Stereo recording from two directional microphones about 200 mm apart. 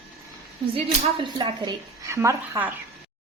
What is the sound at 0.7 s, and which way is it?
A woman's voice, 25° right (ahead or behind).